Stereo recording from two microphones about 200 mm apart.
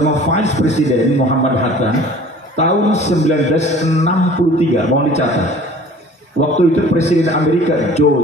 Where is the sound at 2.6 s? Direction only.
35° left (ahead or behind).